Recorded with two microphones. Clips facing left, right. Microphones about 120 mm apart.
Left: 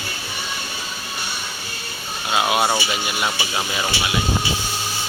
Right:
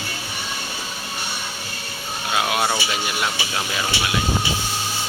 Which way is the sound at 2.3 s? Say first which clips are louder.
Left 3 dB; 10° left (ahead or behind).